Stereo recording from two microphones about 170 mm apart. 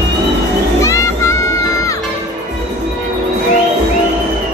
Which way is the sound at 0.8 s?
15° left (ahead or behind).